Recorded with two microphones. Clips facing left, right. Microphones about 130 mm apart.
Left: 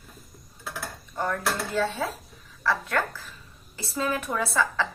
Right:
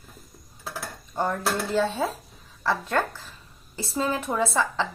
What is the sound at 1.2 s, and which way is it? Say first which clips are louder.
A woman's voice: right 2 dB; 30° right (ahead or behind).